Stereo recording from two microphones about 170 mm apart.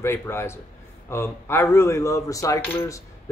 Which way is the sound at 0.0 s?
15° left (ahead or behind).